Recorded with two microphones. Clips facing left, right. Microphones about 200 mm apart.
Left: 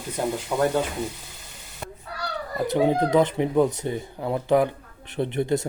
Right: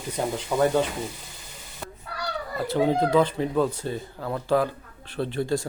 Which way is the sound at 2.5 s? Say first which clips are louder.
Left 2 dB; 15° left (ahead or behind).